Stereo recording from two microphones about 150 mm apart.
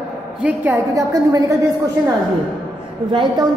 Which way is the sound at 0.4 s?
10° right (ahead or behind).